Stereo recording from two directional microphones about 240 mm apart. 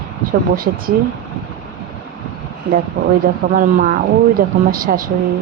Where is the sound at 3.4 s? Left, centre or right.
Right.